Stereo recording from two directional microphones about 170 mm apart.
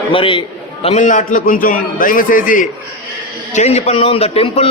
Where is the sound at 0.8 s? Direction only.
45° left (ahead or behind).